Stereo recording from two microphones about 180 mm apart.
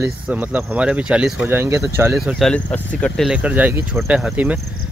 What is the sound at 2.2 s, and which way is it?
Speech, centre (ahead or behind).